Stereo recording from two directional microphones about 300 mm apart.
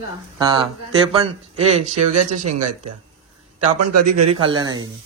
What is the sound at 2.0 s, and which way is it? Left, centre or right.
Speech, right.